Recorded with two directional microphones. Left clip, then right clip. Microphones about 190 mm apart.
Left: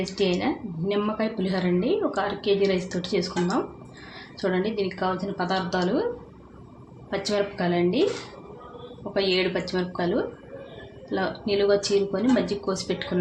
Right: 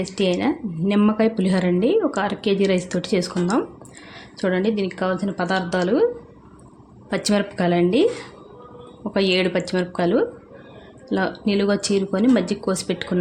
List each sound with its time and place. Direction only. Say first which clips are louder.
0.0 s speech: right 4 dB; 55° right (ahead or behind)
7.1 s speech: right 3 dB; 60° right (ahead or behind)
9.1 s speech: right 4 dB; 60° right (ahead or behind)